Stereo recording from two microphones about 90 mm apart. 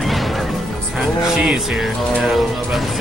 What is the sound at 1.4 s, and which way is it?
Speech, 5° right (ahead or behind).